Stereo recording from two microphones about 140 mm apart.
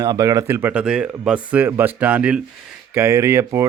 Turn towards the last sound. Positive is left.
turn(degrees=-20)  # may be behind; listen again after turning